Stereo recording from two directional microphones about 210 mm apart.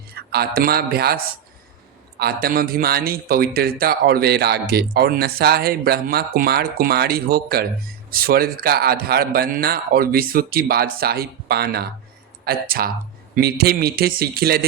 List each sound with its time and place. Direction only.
0.1 s a man's voice: 50° right (ahead or behind)